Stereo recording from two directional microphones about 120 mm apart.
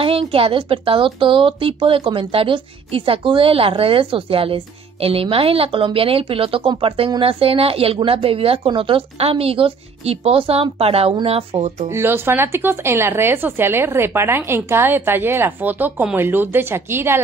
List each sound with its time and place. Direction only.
0.0 s a woman's voice: 50° right (ahead or behind)
11.9 s speech: 20° right (ahead or behind)